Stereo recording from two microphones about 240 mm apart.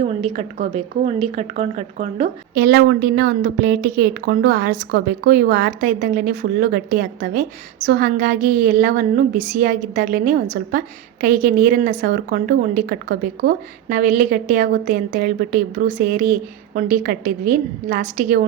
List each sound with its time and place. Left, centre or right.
0.0 s a woman's voice: right
2.6 s a woman's voice: right